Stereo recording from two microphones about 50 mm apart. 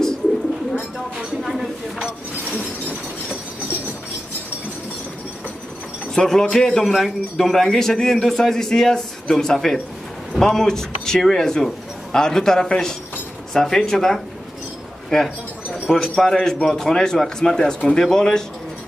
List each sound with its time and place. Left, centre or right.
1.4 s a sound: centre
6.1 s a man's voice: centre
6.7 s a man's voice: centre
15.0 s bird: centre
15.9 s a man's voice: centre